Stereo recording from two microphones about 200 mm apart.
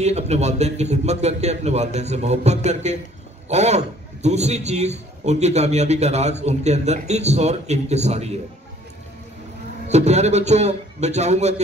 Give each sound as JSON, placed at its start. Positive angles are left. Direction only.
{"t": 0.0, "sound": "a man's voice", "side_deg": -35}
{"t": 9.8, "sound": "a man's voice", "side_deg": -35}